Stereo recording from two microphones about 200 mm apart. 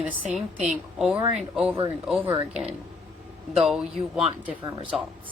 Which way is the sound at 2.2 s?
30° right (ahead or behind).